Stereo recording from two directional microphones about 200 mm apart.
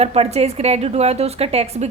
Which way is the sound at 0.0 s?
30° right (ahead or behind).